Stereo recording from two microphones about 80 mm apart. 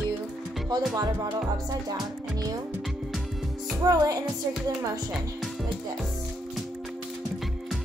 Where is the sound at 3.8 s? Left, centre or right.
Right.